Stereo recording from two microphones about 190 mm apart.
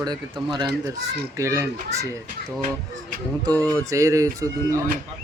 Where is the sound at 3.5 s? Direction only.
10° left (ahead or behind).